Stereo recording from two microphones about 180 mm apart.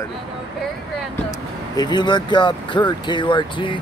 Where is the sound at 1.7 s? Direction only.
25° left (ahead or behind).